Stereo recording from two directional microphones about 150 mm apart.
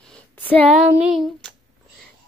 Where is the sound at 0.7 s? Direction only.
5° right (ahead or behind).